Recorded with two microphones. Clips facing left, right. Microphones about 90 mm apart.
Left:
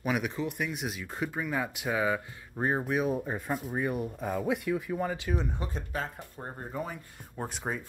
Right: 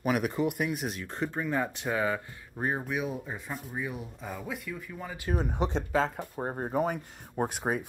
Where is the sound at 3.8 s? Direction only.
55° left (ahead or behind).